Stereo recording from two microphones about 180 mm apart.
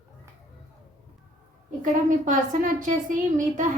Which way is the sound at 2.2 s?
45° right (ahead or behind).